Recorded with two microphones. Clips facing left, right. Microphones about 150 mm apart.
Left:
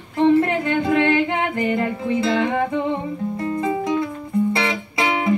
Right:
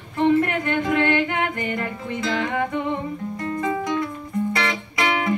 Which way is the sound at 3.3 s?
25° left (ahead or behind).